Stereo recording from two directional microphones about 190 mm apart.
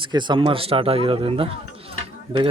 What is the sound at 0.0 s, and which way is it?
Speech, 25° right (ahead or behind).